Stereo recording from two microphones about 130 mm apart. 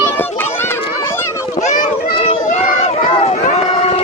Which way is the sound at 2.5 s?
70° left (ahead or behind).